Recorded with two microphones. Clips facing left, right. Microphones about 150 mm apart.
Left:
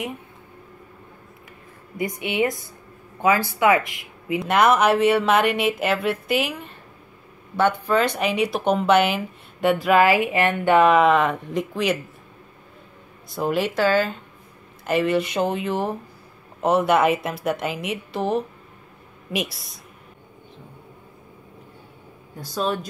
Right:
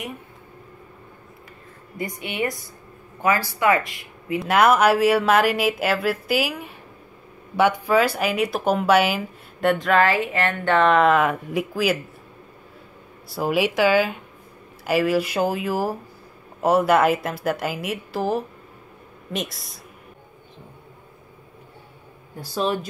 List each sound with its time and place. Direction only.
2.0 s a woman's voice: 20° left (ahead or behind)
4.4 s speech: 5° right (ahead or behind)
13.3 s speech: 5° right (ahead or behind)
22.5 s speech: 5° right (ahead or behind)